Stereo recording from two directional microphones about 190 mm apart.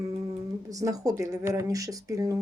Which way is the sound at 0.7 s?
20° right (ahead or behind).